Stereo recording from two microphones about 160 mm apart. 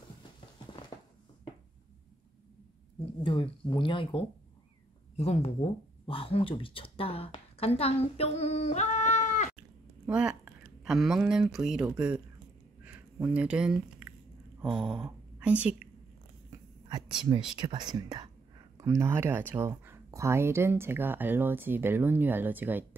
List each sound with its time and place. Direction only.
3.0 s speech: 30° left (ahead or behind); by 9.5 s 50° left (ahead or behind)
10.0 s speech: 5° right (ahead or behind)
14.6 s a sound: 5° right (ahead or behind)
15.3 s a woman's voice: 10° right (ahead or behind)
17.6 s speech: 25° right (ahead or behind); by 22.8 s 10° right (ahead or behind)